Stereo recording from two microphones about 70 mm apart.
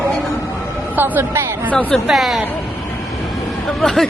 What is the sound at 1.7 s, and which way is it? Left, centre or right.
Speech, left.